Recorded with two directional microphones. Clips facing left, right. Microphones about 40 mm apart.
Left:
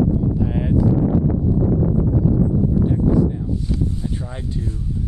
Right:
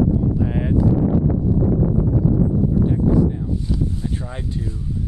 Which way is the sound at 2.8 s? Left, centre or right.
Centre.